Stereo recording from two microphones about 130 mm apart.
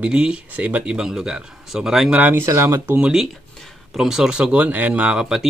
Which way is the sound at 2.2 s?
15° right (ahead or behind).